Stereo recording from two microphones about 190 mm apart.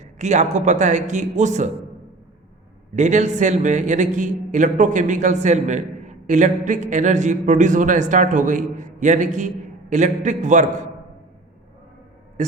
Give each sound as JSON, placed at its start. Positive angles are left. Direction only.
{"t": 0.0, "sound": "a man's voice", "side_deg": -40}
{"t": 2.9, "sound": "a man's voice", "side_deg": -40}
{"t": 12.4, "sound": "a man's voice", "side_deg": -40}